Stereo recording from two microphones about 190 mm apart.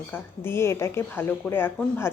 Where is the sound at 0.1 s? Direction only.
15° left (ahead or behind).